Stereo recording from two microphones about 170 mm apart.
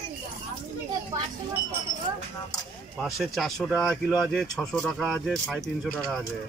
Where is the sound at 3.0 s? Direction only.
Centre (ahead or behind).